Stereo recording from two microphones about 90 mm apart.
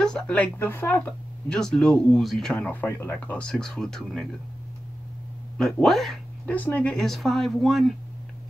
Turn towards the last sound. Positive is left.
turn(degrees=0)  # may be behind; listen again after turning